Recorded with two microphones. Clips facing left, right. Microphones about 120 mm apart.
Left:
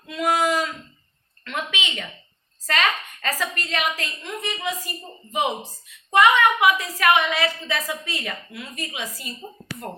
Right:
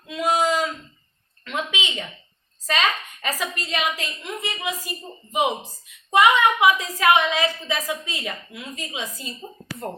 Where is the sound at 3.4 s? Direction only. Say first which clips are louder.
Even; 15° right (ahead or behind).